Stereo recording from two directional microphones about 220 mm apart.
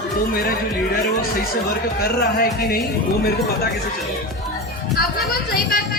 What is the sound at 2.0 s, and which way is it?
Music, 45° left (ahead or behind).